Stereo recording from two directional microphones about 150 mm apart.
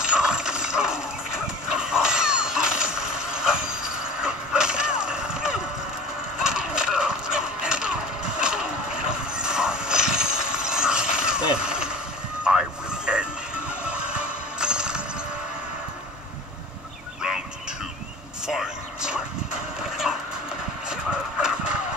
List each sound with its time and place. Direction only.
0.0 s coin: 5° right (ahead or behind)
1.7 s caw: 5° right (ahead or behind)
6.4 s horse: 5° right (ahead or behind)
12.4 s a sound: 5° right (ahead or behind)
14.6 s music: 5° right (ahead or behind)
18.5 s vehicle: 5° right (ahead or behind)
20.9 s shuffle: 5° right (ahead or behind)